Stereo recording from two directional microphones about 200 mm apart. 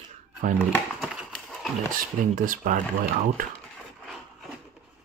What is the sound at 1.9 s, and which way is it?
Speech, 45° right (ahead or behind).